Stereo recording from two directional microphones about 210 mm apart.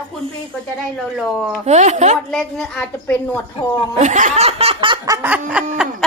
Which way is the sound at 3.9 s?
35° right (ahead or behind).